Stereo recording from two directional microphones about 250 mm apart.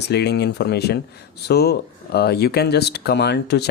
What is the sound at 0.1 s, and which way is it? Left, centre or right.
Speech, left.